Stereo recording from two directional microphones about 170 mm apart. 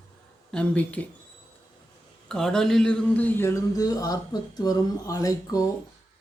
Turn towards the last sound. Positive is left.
turn(degrees=20)  # may be behind; listen again after turning